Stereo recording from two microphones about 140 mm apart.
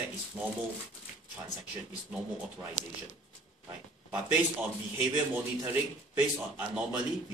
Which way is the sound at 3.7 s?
10° right (ahead or behind).